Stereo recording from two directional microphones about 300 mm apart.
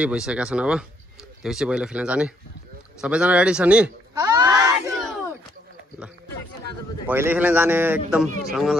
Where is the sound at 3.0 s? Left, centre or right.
Centre.